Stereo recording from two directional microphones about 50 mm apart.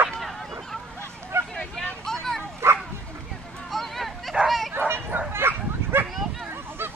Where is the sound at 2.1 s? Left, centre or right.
Centre.